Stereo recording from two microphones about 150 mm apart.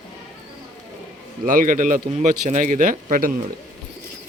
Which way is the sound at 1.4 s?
60° right (ahead or behind).